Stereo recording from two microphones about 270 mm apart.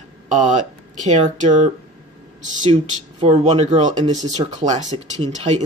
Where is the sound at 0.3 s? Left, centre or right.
Right.